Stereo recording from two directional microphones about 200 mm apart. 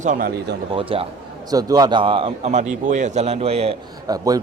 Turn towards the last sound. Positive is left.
turn(degrees=-20)  # may be behind; listen again after turning